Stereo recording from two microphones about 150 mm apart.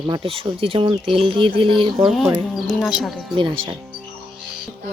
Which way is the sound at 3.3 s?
35° right (ahead or behind).